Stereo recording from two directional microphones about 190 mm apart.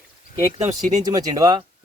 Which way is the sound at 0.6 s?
40° right (ahead or behind).